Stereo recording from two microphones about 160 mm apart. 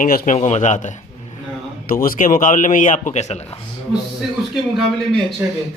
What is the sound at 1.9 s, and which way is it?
A man's voice, 60° left (ahead or behind).